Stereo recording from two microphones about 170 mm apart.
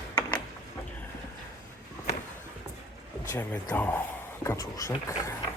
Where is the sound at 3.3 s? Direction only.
10° left (ahead or behind).